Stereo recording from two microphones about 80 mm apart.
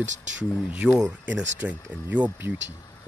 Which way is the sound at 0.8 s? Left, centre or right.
Centre.